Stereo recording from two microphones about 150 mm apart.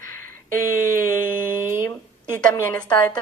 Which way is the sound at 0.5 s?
65° right (ahead or behind).